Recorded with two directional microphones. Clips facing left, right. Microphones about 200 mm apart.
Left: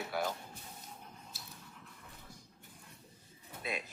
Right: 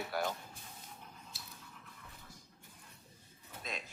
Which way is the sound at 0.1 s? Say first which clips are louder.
Left 1 dB; centre (ahead or behind).